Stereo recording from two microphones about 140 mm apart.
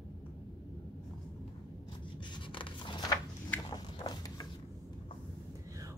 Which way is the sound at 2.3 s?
35° left (ahead or behind).